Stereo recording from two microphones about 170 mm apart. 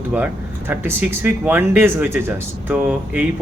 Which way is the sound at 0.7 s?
10° right (ahead or behind).